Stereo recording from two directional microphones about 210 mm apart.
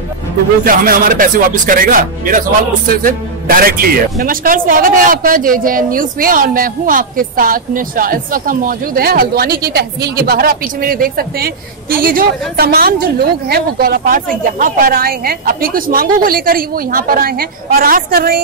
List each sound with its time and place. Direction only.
0.7 s a man's voice: 40° right (ahead or behind)